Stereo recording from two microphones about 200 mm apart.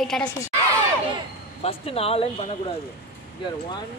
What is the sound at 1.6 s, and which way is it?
Speech, 30° left (ahead or behind).